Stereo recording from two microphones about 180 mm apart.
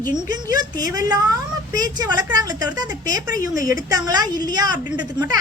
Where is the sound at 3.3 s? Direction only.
50° left (ahead or behind).